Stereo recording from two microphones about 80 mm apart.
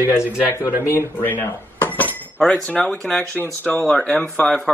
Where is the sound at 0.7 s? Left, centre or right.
Right.